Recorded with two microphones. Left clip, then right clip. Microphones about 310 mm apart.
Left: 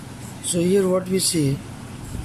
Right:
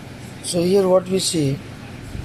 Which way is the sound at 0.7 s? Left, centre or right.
Right.